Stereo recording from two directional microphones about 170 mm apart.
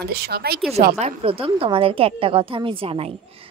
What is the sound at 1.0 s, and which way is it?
Speech, 35° right (ahead or behind).